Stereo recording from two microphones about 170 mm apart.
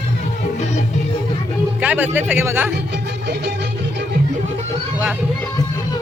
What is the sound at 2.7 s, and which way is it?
Music, 80° right.